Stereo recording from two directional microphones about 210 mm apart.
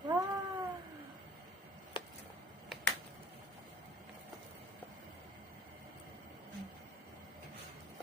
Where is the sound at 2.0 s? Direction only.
25° left (ahead or behind).